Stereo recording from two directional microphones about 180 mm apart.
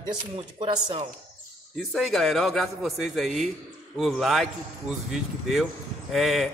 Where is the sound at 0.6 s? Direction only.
30° right (ahead or behind).